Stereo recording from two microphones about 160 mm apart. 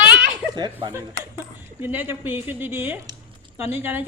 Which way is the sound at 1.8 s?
10° right (ahead or behind).